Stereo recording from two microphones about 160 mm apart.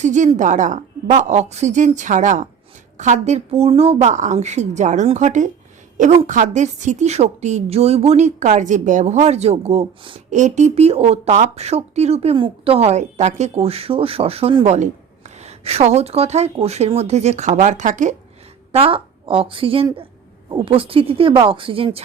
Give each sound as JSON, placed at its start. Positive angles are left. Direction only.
{"t": 0.0, "sound": "a woman's voice", "side_deg": -50}
{"t": 10.2, "sound": "a woman's voice", "side_deg": -50}
{"t": 18.7, "sound": "a woman's voice", "side_deg": -35}